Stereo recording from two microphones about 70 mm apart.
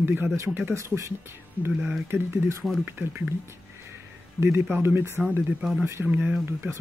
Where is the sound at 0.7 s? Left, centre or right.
Right.